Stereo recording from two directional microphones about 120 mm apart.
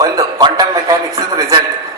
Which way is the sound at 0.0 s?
35° right (ahead or behind).